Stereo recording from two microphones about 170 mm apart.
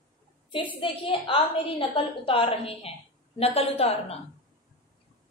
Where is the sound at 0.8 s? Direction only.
30° left (ahead or behind).